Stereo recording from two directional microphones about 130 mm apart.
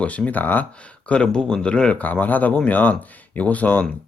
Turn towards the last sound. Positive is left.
turn(degrees=10)  # may be behind; listen again after turning